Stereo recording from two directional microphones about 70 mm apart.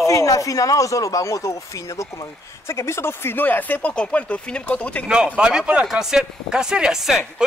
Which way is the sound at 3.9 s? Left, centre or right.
Centre.